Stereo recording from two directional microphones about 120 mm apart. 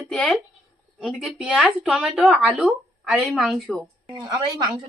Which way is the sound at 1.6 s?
10° right (ahead or behind).